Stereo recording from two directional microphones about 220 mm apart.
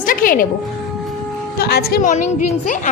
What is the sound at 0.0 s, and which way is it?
Music, 40° left (ahead or behind).